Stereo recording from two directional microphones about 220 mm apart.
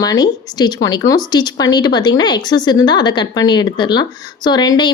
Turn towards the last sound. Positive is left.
turn(degrees=20)  # may be behind; listen again after turning